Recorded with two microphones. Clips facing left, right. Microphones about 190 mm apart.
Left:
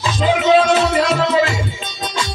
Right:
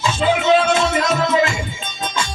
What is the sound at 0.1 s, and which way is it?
Music, 35° left (ahead or behind).